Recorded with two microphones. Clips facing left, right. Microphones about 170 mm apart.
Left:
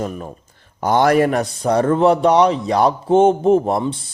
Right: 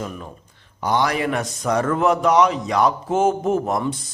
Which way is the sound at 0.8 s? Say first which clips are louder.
Left 7 dB; 50° left (ahead or behind).